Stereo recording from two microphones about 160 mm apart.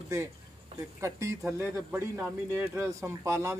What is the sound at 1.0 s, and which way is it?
Speech, 20° right (ahead or behind).